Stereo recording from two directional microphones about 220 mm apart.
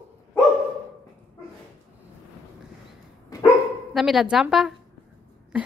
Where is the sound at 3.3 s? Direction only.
15° left (ahead or behind).